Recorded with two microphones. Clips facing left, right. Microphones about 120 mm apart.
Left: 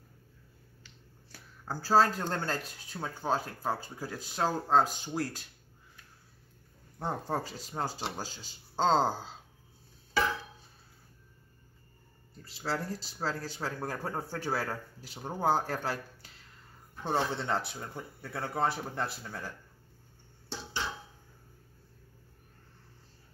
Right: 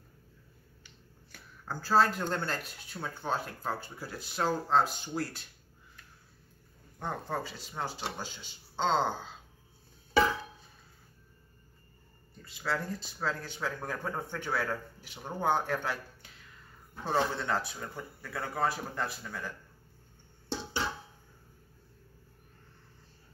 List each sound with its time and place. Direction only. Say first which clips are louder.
1.3 s speech: left 1 dB; 35° left (ahead or behind)
7.0 s speech: left 2 dB; 35° left (ahead or behind)
12.4 s speech: even; 35° left (ahead or behind)
17.1 s speech: right 1 dB; 25° left (ahead or behind)